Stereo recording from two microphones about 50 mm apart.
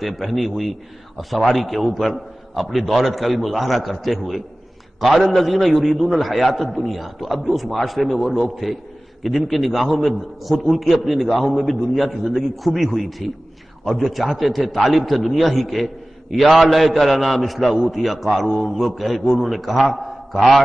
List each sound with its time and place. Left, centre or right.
0.0 s a man's voice: centre
14.1 s a man's voice: centre